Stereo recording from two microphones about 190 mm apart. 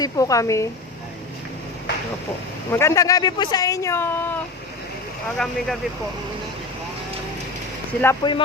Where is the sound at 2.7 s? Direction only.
15° left (ahead or behind).